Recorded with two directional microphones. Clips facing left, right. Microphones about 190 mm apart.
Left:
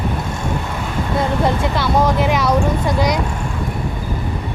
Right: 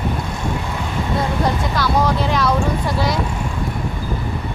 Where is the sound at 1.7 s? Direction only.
20° left (ahead or behind).